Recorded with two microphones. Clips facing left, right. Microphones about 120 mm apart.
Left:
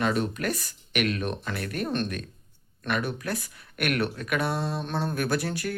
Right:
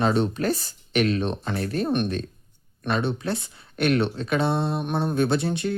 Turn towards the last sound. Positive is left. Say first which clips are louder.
# right 5 dB
turn(degrees=-25)  # may be behind; listen again after turning